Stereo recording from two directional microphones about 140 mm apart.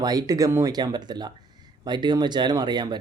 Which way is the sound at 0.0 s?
30° right (ahead or behind).